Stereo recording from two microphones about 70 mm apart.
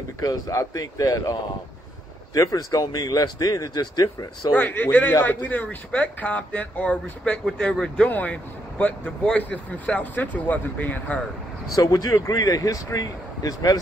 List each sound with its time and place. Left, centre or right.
0.2 s speech: left
4.6 s speech: left
11.7 s speech: left